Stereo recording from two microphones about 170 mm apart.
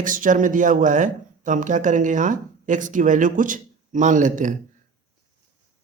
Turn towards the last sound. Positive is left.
turn(degrees=-50)  # may be behind; listen again after turning